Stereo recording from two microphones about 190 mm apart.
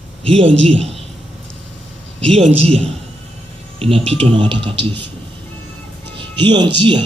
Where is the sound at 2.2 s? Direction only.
30° right (ahead or behind).